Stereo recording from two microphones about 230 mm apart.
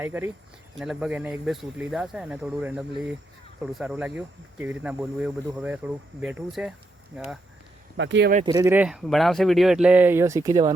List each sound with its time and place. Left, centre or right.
0.0 s speech: centre
7.9 s speech: right
8.4 s speech: centre